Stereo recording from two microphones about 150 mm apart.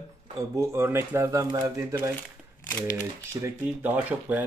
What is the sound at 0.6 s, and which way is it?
Speech, 15° right (ahead or behind).